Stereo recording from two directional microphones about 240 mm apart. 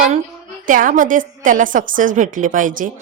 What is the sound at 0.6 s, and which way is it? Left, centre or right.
A woman's voice, right.